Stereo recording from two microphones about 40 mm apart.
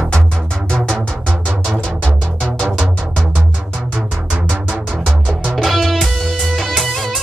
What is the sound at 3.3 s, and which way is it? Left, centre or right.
Music, right.